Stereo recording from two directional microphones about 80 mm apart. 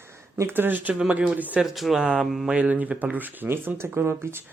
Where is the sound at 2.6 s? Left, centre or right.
Centre.